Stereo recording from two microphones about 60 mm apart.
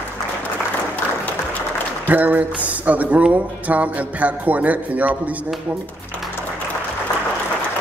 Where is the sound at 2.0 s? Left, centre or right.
Right.